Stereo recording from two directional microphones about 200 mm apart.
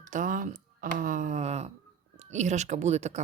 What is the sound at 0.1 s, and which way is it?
Speech, 40° right (ahead or behind).